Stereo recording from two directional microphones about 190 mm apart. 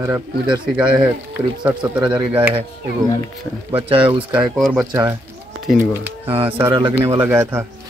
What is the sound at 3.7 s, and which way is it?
Speech, 30° right (ahead or behind).